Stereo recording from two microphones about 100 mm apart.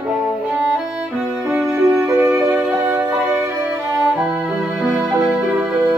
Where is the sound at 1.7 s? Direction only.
30° right (ahead or behind).